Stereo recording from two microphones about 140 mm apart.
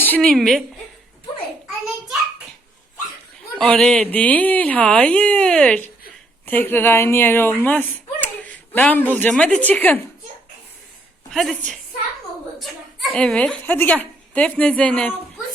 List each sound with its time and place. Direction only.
0.0 s a woman's voice: 10° left (ahead or behind)
3.6 s speech: 5° left (ahead or behind)
11.3 s a woman's voice: centre (ahead or behind)